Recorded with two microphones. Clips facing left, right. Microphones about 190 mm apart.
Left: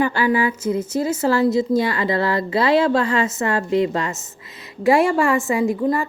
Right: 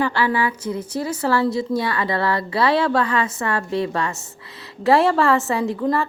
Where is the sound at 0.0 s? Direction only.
20° left (ahead or behind).